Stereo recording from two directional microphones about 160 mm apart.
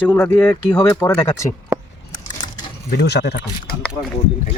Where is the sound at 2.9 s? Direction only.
90° left.